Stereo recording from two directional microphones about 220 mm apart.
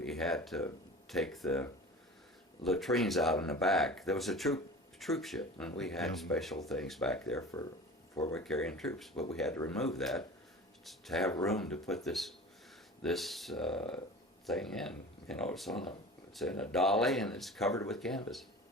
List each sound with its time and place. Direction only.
0.0 s speech: centre (ahead or behind)